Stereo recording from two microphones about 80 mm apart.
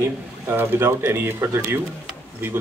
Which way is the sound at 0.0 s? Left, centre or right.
Right.